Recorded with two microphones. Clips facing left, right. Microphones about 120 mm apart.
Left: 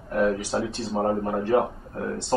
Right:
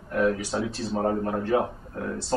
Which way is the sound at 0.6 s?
5° left (ahead or behind).